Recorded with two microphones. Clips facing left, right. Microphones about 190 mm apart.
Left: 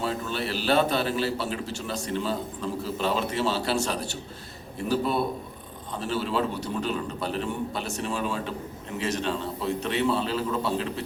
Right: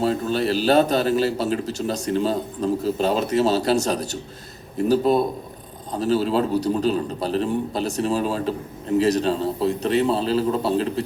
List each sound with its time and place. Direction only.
0.0 s a man's voice: 40° right (ahead or behind)